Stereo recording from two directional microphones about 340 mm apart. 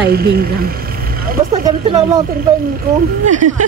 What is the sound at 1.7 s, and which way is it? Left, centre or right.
Speech, centre.